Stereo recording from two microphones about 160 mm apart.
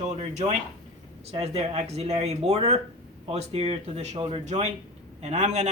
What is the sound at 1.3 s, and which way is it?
Speech, 40° right (ahead or behind).